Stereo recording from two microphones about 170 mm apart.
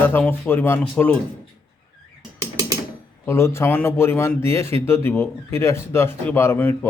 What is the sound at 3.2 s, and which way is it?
Speech, 15° left (ahead or behind).